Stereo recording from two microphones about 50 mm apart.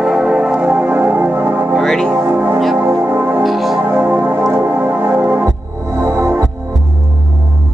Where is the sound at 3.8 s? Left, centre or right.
Right.